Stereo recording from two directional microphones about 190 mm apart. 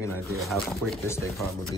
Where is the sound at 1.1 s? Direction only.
15° left (ahead or behind).